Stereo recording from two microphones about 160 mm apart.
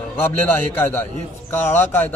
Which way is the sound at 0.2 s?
10° left (ahead or behind).